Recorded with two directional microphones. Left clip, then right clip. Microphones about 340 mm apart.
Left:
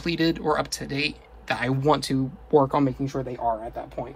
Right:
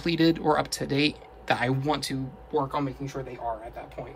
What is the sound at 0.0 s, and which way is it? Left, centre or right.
Speech, centre.